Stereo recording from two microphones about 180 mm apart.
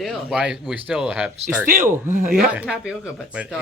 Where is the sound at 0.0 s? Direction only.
Centre (ahead or behind).